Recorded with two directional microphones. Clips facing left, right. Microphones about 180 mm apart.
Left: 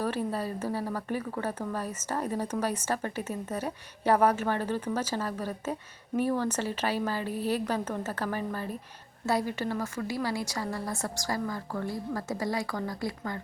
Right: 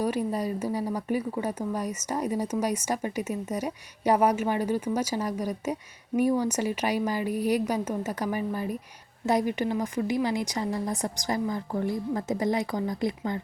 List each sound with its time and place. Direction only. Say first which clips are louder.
0.0 s speech: right 3 dB; 10° right (ahead or behind)